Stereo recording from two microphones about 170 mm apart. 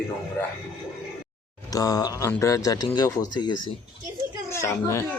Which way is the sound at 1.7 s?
20° left (ahead or behind).